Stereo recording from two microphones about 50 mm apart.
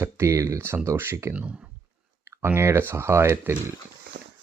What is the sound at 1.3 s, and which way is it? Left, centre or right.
Speech, right.